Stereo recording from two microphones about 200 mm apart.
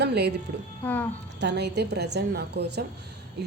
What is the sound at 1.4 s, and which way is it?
A woman's voice, 60° right (ahead or behind).